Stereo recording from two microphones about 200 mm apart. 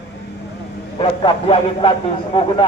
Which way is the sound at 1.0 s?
25° left (ahead or behind).